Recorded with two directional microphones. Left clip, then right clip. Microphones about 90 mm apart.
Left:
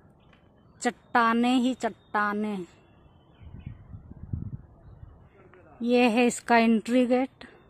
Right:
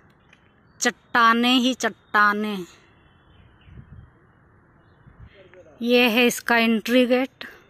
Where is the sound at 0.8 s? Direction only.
25° right (ahead or behind).